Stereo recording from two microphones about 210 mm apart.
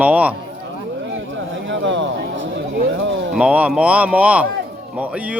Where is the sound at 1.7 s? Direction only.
60° right (ahead or behind).